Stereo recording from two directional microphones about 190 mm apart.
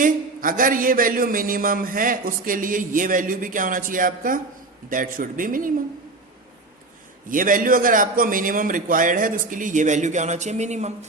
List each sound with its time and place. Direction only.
0.0 s speech: 45° right (ahead or behind)
7.3 s speech: 45° right (ahead or behind)